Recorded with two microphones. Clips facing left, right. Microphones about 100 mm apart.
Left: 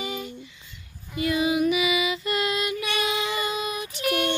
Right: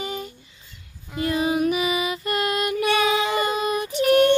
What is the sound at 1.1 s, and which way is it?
Music, 40° right (ahead or behind).